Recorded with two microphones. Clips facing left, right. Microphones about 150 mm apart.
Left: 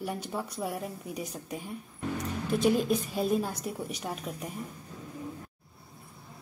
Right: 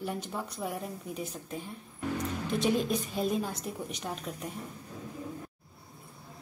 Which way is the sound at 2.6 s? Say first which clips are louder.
Left 3 dB; 5° left (ahead or behind).